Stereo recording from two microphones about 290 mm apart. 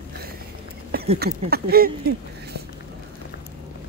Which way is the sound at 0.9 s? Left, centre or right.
Right.